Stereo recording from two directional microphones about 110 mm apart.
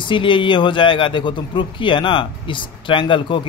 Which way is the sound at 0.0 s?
50° left (ahead or behind).